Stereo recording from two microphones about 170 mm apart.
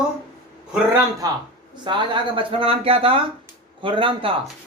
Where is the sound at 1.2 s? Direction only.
20° right (ahead or behind).